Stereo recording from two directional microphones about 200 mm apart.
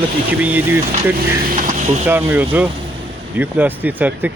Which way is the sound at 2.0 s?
10° right (ahead or behind).